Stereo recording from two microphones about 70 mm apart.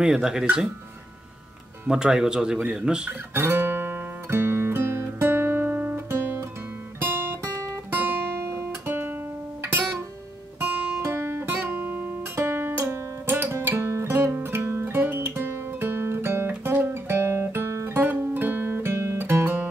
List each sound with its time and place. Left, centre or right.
0.0 s speech: centre
1.9 s speech: centre
3.1 s guitar: right
10.6 s guitar: right